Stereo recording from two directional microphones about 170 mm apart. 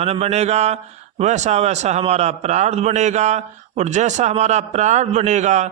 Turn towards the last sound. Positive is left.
turn(degrees=-45)  # may be behind; listen again after turning